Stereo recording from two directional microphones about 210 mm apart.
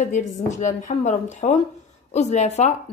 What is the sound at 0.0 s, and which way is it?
Speech, 35° left (ahead or behind).